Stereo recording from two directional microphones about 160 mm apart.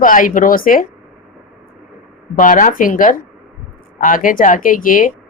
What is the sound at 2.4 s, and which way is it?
Speech, 55° left (ahead or behind).